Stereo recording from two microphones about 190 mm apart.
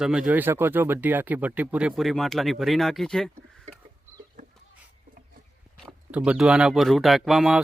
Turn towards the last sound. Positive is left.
turn(degrees=-5)  # may be behind; listen again after turning